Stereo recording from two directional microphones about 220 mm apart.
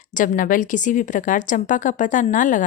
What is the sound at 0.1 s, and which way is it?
A woman's voice, 35° left (ahead or behind).